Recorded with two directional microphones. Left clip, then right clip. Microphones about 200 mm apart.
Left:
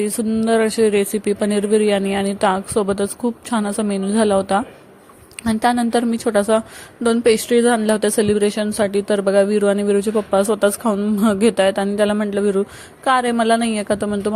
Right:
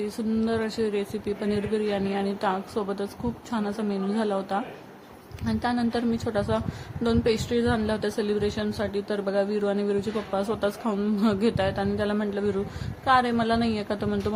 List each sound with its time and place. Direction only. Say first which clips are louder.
0.4 s speech: left 13 dB; 30° left (ahead or behind)